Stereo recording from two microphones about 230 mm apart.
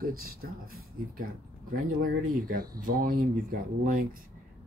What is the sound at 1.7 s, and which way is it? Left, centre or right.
Speech, right.